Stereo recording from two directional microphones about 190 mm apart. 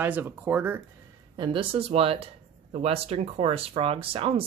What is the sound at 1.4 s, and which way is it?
Speech, 25° right (ahead or behind).